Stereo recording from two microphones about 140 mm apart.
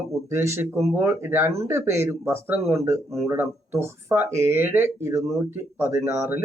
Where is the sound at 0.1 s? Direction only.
20° right (ahead or behind).